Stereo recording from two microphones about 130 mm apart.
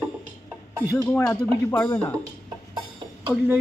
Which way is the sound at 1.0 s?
5° left (ahead or behind).